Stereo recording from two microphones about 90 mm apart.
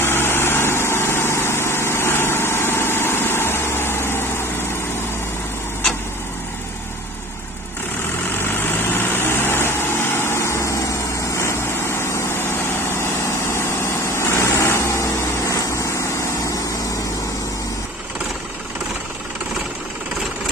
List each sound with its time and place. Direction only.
0.0 s vehicle: 25° left (ahead or behind)
8.4 s vehicle: 25° left (ahead or behind)
12.0 s vehicle: 25° left (ahead or behind)
14.1 s vehicle: 30° left (ahead or behind)